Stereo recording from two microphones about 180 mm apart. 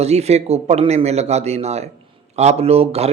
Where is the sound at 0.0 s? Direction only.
35° right (ahead or behind).